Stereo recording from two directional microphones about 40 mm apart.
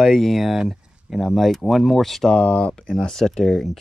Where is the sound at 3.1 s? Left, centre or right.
Centre.